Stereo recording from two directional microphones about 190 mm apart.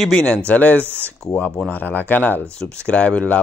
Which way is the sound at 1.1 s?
5° left (ahead or behind).